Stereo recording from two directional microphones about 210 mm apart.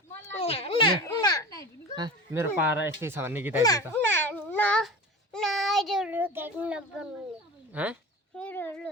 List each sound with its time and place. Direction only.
0.3 s a sound: 25° left (ahead or behind)
1.0 s children playing: 20° left (ahead or behind)
2.0 s speech: 15° right (ahead or behind)
3.6 s babbling: 15° left (ahead or behind)
5.3 s child singing: centre (ahead or behind)
7.7 s speech: 5° right (ahead or behind)
8.4 s a sound: 10° left (ahead or behind)